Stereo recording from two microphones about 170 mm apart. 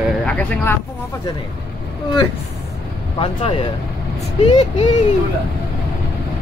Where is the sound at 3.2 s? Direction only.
35° left (ahead or behind).